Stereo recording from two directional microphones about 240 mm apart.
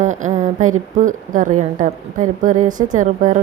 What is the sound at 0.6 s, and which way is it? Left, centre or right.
Speech, right.